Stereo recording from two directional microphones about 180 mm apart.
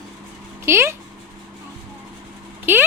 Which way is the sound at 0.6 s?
15° right (ahead or behind).